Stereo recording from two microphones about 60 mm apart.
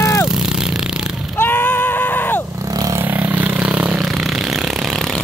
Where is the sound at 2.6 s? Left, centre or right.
Right.